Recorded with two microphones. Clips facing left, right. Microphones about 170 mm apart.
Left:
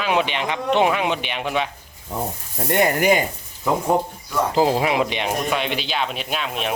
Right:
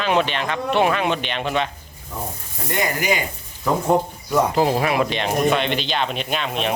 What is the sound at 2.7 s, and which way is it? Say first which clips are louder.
Speech: left 5 dB; 55° left (ahead or behind).